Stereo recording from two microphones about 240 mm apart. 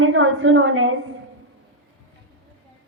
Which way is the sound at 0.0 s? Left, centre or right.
Right.